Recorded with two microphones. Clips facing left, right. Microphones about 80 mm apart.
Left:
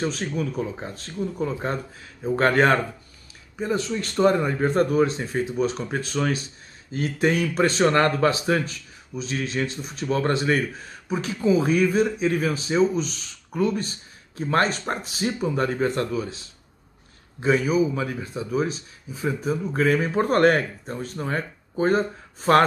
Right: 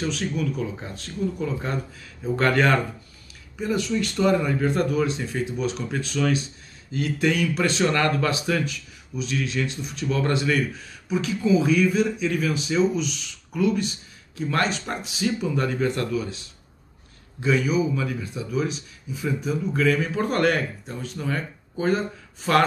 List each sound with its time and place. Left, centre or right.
0.0 s speech: left